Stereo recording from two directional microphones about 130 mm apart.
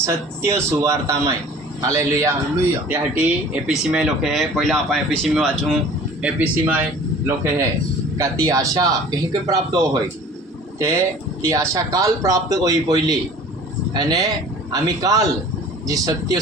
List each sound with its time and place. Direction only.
0.0 s speech: 20° right (ahead or behind)
2.9 s speech: 10° right (ahead or behind)
6.2 s speech: 10° right (ahead or behind)
8.2 s speech: 25° right (ahead or behind)